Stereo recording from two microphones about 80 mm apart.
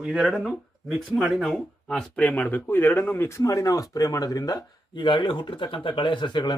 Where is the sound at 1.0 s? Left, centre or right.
Centre.